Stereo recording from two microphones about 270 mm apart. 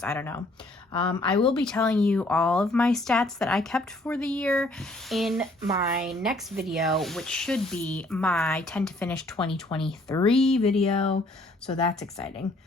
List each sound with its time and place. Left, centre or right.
0.0 s speech: centre
0.9 s speech: centre
1.5 s speech: centre
5.7 s speech: centre
9.6 s speech: centre
10.2 s speech: centre
12.4 s speech: centre